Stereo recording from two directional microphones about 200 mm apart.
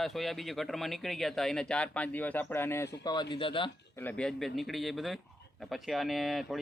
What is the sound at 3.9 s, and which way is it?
Speech, 10° left (ahead or behind).